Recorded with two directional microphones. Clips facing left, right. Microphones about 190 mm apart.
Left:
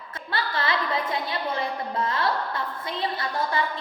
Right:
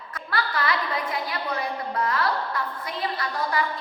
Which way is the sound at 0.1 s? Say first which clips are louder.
Right 1 dB; 25° left (ahead or behind).